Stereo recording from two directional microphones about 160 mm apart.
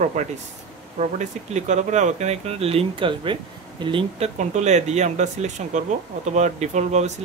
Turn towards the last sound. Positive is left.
turn(degrees=-45)  # may be behind; listen again after turning